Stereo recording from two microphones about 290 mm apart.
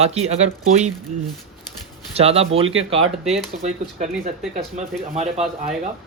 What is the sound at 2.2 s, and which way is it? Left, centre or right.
Speech, right.